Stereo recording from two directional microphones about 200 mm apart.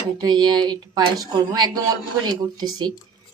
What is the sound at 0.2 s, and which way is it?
A woman's voice, 20° right (ahead or behind).